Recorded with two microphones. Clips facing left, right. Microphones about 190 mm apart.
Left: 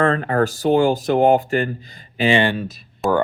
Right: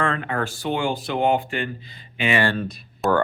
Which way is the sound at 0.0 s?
40° left (ahead or behind).